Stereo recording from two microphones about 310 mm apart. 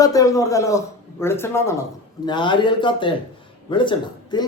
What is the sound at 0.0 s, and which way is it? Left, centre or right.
A woman's voice, centre.